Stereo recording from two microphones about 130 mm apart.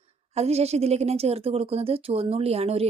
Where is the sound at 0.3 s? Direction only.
55° right (ahead or behind).